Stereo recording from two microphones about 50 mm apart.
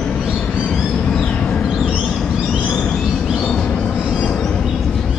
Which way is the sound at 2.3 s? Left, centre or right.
Centre.